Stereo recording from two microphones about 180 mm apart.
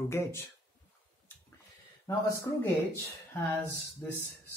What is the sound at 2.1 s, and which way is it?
Speech, 15° left (ahead or behind).